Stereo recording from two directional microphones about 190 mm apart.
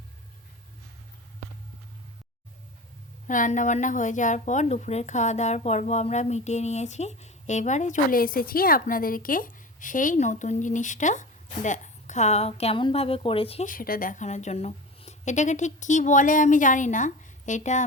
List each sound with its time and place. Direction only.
3.2 s a woman's voice: 40° left (ahead or behind)
13.7 s a woman's voice: 50° left (ahead or behind)